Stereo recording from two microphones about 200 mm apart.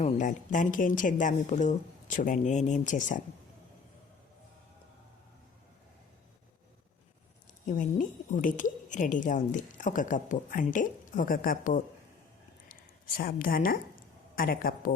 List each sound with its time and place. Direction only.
0.0 s a woman's voice: 40° left (ahead or behind)
7.7 s a woman's voice: 45° left (ahead or behind)
13.1 s a woman's voice: 45° left (ahead or behind)